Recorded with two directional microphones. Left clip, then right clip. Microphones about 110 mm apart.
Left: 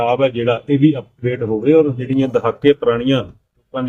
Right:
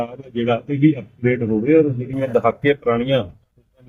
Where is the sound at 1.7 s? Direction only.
40° left (ahead or behind).